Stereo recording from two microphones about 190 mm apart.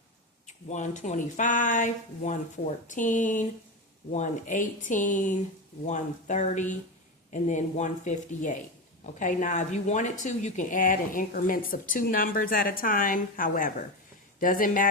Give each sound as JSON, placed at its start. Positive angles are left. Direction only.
{"t": 0.4, "sound": "speech", "side_deg": 40}